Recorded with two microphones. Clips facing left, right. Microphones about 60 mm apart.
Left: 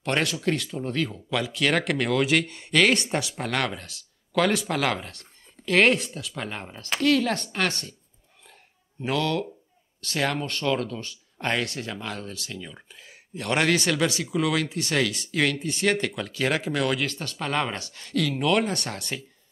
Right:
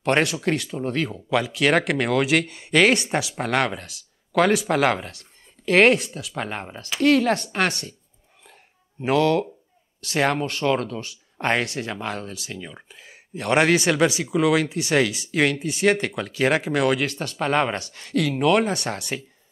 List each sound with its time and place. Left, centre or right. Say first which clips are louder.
0.0 s speech: right 4 dB; right
9.0 s speech: right 6 dB; right
11.6 s speech: right 4 dB; centre
17.3 s speech: right 7 dB; right